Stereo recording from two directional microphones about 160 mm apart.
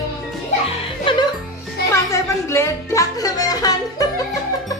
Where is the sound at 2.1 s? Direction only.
15° left (ahead or behind).